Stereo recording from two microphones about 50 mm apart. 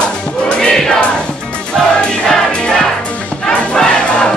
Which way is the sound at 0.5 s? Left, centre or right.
Centre.